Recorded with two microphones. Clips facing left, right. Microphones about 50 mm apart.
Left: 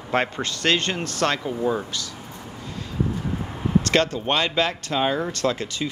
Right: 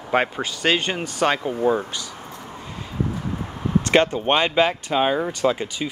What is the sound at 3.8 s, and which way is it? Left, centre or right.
Speech, right.